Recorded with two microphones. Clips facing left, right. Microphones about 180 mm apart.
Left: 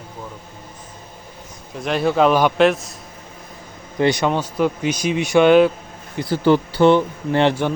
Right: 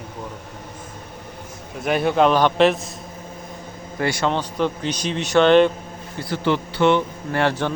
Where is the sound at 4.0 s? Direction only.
20° left (ahead or behind).